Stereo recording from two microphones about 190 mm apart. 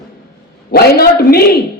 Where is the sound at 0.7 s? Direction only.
55° left (ahead or behind).